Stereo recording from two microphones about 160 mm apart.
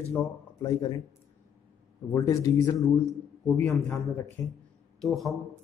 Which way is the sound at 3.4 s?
5° left (ahead or behind).